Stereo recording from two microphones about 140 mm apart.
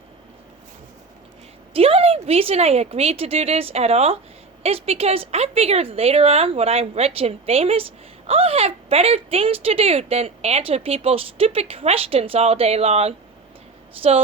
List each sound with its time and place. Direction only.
1.7 s speech: 45° right (ahead or behind)